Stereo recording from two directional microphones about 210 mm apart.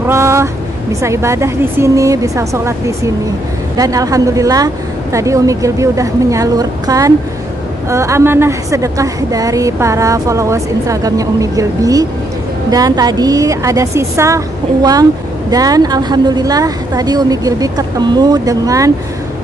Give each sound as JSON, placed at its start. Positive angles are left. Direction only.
{"t": 0.0, "sound": "a woman's voice", "side_deg": -10}